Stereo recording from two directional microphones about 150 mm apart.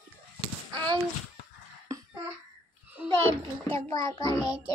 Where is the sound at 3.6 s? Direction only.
20° left (ahead or behind).